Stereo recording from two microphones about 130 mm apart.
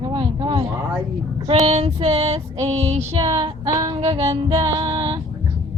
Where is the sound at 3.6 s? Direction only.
30° right (ahead or behind).